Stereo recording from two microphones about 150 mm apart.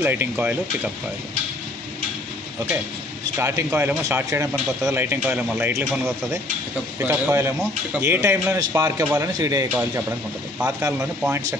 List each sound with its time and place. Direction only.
0.0 s speech: 10° right (ahead or behind)
3.3 s speech: 15° right (ahead or behind)
9.7 s speech: 10° right (ahead or behind)